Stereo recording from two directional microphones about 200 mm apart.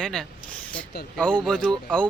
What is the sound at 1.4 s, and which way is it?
Speech, centre (ahead or behind).